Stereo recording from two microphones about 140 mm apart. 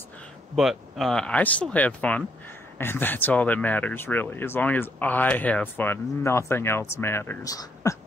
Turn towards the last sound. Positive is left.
turn(degrees=25)  # may be behind; listen again after turning